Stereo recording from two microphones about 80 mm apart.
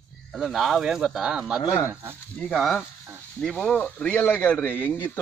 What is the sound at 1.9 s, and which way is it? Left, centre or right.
Speech, right.